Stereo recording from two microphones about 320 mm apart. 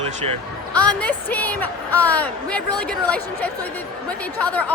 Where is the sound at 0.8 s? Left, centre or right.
Centre.